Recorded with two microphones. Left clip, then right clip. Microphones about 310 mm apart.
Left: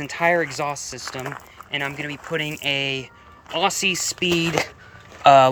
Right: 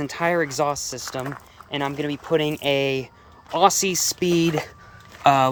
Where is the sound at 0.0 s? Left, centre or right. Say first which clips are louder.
Left 2 dB; centre.